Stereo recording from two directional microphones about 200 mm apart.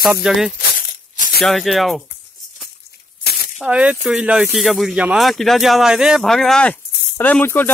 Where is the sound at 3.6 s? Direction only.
5° right (ahead or behind).